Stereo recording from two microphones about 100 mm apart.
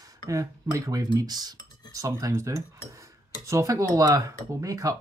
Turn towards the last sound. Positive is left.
turn(degrees=-35)  # may be behind; listen again after turning